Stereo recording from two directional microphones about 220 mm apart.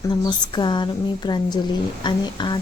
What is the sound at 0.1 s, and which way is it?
A woman's voice, 20° left (ahead or behind).